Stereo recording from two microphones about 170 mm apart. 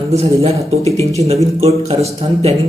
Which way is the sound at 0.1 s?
40° right (ahead or behind).